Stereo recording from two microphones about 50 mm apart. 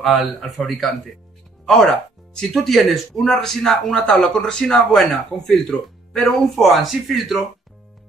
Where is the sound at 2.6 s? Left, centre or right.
Centre.